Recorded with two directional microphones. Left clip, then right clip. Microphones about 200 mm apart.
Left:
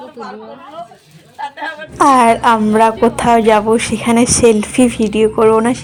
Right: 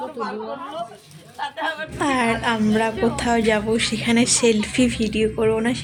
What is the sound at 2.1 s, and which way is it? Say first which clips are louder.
A woman's voice: left 12 dB; 25° left (ahead or behind).